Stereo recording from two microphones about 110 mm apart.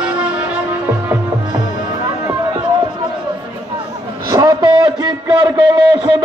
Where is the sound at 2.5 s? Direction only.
45° right (ahead or behind).